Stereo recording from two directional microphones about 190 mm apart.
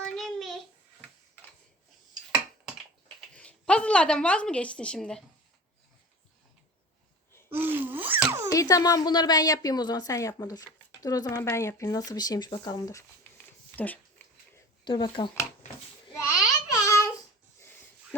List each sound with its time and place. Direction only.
0.0 s child singing: centre (ahead or behind)
3.2 s speech: 5° left (ahead or behind)
7.5 s a sound: 10° right (ahead or behind)
8.5 s a woman's voice: 20° left (ahead or behind)
13.7 s dog: 10° left (ahead or behind)
14.8 s speech: 25° left (ahead or behind)
16.1 s babbling: 15° left (ahead or behind)